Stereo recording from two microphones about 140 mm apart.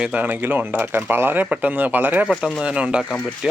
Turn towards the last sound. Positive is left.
turn(degrees=-5)  # may be behind; listen again after turning